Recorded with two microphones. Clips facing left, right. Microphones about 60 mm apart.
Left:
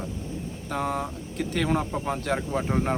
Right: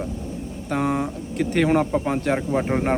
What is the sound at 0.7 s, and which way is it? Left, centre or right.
Speech, right.